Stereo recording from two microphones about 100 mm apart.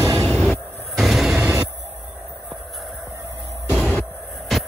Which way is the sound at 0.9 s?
Centre (ahead or behind).